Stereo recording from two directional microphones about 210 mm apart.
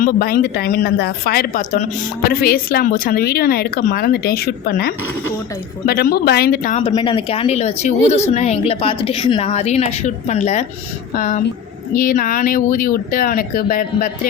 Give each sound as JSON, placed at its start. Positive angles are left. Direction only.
{"t": 0.0, "sound": "speech", "side_deg": 45}
{"t": 6.8, "sound": "a woman's voice", "side_deg": 25}